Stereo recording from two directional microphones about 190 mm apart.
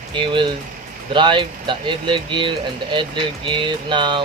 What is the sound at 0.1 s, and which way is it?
Speech, 25° right (ahead or behind).